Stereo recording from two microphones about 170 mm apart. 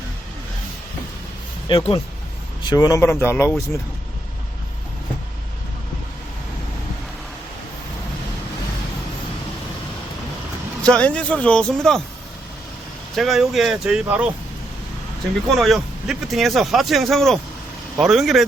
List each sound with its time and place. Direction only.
1.6 s speech: 30° left (ahead or behind); by 3.5 s 15° left (ahead or behind)
10.8 s a man's voice: 5° left (ahead or behind)
13.1 s a man's voice: centre (ahead or behind)
15.5 s a man's voice: centre (ahead or behind)